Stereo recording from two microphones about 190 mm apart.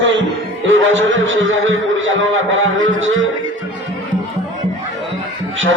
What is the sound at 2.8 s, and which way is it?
Music, 85° right.